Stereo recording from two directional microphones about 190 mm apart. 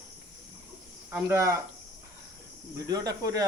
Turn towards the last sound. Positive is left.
turn(degrees=-20)  # may be behind; listen again after turning